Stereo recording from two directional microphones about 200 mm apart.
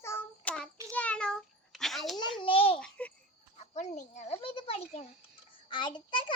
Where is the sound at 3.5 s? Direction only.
35° left (ahead or behind).